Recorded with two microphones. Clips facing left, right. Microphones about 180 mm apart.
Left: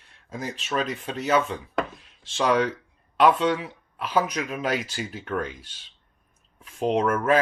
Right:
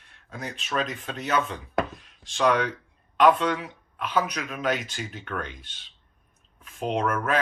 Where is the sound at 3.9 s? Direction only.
35° left (ahead or behind).